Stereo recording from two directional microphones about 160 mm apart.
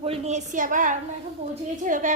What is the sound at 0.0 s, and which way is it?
A woman's voice, 40° right (ahead or behind).